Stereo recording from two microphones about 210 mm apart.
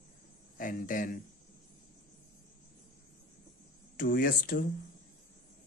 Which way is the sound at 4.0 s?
40° left (ahead or behind).